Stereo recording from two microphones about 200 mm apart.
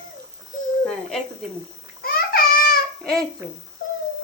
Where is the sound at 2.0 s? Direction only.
50° left (ahead or behind).